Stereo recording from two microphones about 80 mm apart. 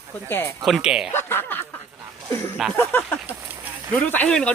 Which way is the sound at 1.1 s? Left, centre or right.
Left.